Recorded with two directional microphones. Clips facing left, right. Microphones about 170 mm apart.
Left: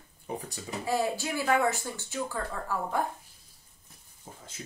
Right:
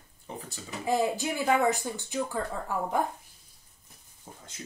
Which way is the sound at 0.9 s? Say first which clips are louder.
Right 2 dB; 20° right (ahead or behind).